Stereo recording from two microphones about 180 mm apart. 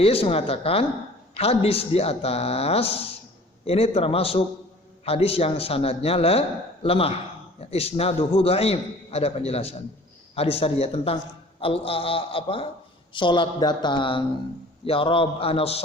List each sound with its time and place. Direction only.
0.0 s a man's voice: 30° left (ahead or behind)